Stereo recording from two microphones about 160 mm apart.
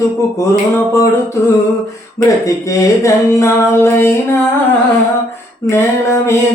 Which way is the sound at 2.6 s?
20° left (ahead or behind).